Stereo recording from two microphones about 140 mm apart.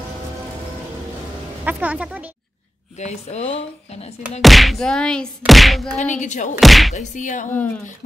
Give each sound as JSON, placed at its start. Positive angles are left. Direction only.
{"t": 1.6, "sound": "speech", "side_deg": -10}
{"t": 3.0, "sound": "speech", "side_deg": 55}
{"t": 4.4, "sound": "a sound", "side_deg": 0}
{"t": 5.9, "sound": "speech", "side_deg": 60}
{"t": 6.6, "sound": "a sound", "side_deg": 0}
{"t": 7.0, "sound": "speech", "side_deg": 60}